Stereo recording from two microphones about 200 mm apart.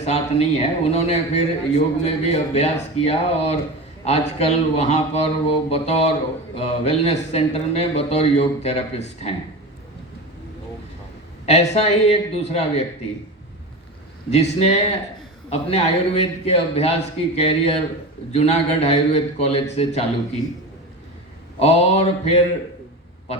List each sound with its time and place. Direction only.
0.0 s a man's voice: 30° left (ahead or behind)
11.4 s a man's voice: 35° left (ahead or behind)
14.3 s a man's voice: 30° left (ahead or behind)
21.6 s a man's voice: 30° left (ahead or behind)